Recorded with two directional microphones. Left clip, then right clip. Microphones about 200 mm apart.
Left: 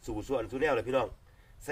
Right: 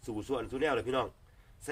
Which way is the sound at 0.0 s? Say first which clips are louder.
Left 2 dB; 20° right (ahead or behind).